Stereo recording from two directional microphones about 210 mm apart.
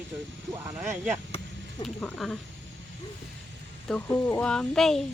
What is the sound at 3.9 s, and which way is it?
Speech, 10° left (ahead or behind).